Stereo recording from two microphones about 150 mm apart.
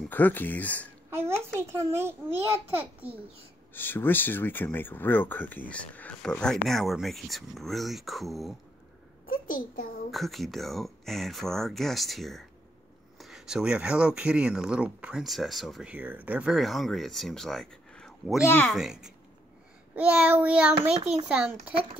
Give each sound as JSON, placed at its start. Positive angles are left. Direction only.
{"t": 0.1, "sound": "speech", "side_deg": 10}
{"t": 1.1, "sound": "a child's voice", "side_deg": -15}
{"t": 3.7, "sound": "speech", "side_deg": 15}
{"t": 9.2, "sound": "a child's voice", "side_deg": 70}
{"t": 10.1, "sound": "speech", "side_deg": 0}
{"t": 18.4, "sound": "speech", "side_deg": 15}
{"t": 18.7, "sound": "speech", "side_deg": -5}
{"t": 20.0, "sound": "child singing", "side_deg": -10}